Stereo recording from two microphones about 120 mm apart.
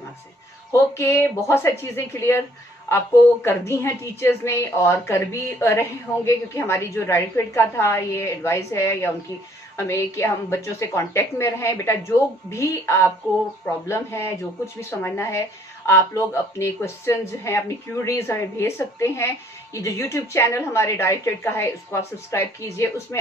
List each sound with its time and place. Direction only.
0.7 s a woman's voice: 20° left (ahead or behind)
3.4 s a woman's voice: 20° left (ahead or behind)